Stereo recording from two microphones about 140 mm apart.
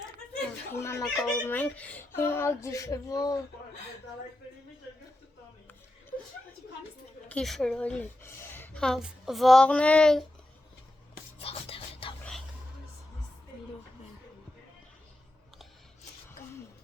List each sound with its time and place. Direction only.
0.3 s a sound: 15° left (ahead or behind)
1.1 s speech: 5° left (ahead or behind); by 3.4 s 25° left (ahead or behind)
7.3 s speech: 5° left (ahead or behind)
8.4 s a sound: 15° left (ahead or behind)
8.8 s speech: 5° left (ahead or behind)
11.3 s music: 45° left (ahead or behind)